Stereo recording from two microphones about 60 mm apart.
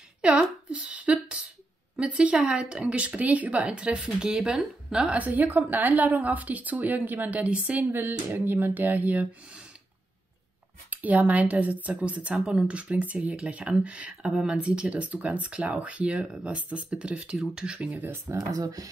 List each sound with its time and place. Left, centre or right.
0.2 s a woman's voice: centre
5.1 s a woman's voice: right
7.9 s speech: right
10.9 s a woman's voice: right; by 17.8 s centre
18.0 s speech: right
18.5 s speech: right